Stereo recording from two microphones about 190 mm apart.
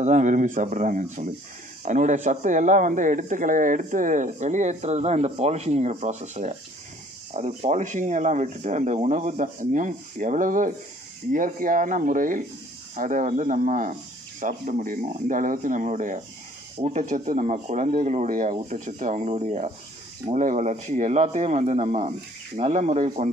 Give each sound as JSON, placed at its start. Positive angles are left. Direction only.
{"t": 0.0, "sound": "speech", "side_deg": -40}